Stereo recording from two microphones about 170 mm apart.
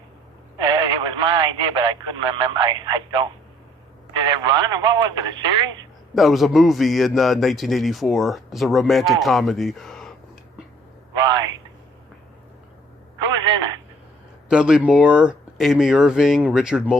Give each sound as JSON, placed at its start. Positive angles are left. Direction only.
{"t": 0.6, "sound": "speech", "side_deg": -25}
{"t": 6.1, "sound": "a man's voice", "side_deg": 0}
{"t": 11.2, "sound": "a sound", "side_deg": -25}
{"t": 13.3, "sound": "telephone", "side_deg": -25}
{"t": 14.5, "sound": "a man's voice", "side_deg": -5}